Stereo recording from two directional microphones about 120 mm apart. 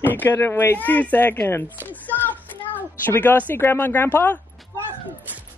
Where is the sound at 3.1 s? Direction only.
15° left (ahead or behind).